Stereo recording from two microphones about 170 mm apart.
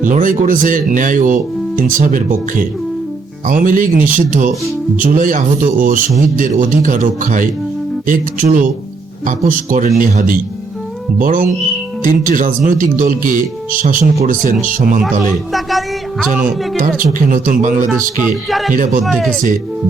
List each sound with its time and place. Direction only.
0.0 s speech: 50° right (ahead or behind)
14.8 s speech: 50° right (ahead or behind)
16.3 s speech: 50° right (ahead or behind)
19.0 s speech: centre (ahead or behind)